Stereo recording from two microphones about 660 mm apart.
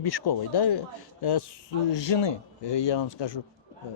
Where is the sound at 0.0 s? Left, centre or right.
Left.